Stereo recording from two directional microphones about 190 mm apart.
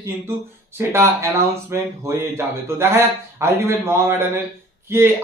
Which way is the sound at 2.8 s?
15° right (ahead or behind).